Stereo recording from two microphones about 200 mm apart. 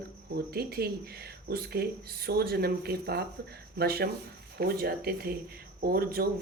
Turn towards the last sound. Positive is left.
turn(degrees=-50)  # may be behind; listen again after turning